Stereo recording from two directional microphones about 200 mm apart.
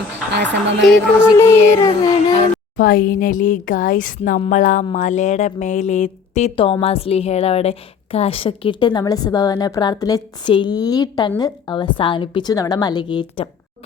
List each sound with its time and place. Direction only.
0.3 s a woman's voice: 60° right (ahead or behind)
1.4 s a sound: 15° left (ahead or behind)
2.7 s a woman's voice: 45° left (ahead or behind); by 13.5 s 25° left (ahead or behind)